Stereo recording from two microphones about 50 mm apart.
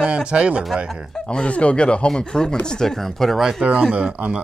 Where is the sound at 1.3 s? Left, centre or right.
Left; by 3.4 s centre.